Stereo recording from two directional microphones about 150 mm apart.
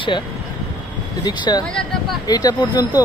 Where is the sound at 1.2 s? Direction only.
25° left (ahead or behind).